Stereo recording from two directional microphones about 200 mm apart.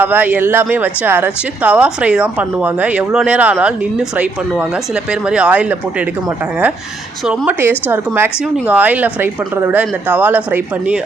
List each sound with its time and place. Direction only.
0.0 s speech: 10° right (ahead or behind)
7.3 s speech: 10° right (ahead or behind)